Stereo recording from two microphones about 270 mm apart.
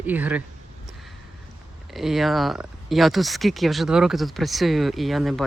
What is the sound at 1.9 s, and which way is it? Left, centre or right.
Speech, centre.